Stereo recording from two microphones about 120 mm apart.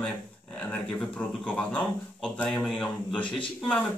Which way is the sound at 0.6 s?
5° left (ahead or behind).